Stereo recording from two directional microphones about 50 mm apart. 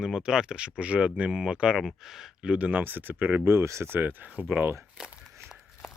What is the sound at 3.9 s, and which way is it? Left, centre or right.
Speech, right.